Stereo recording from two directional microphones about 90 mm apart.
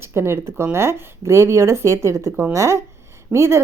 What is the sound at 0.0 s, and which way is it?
Speech, 25° right (ahead or behind).